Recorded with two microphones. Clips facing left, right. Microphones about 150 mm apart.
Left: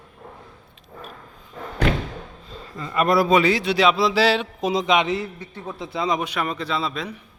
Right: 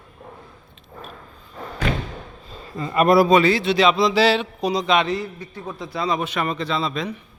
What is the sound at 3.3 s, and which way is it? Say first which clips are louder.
Speech: right 2 dB; 10° left (ahead or behind).